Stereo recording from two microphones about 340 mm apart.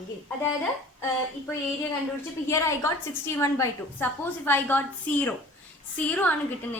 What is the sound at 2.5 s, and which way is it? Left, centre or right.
A woman's voice, centre.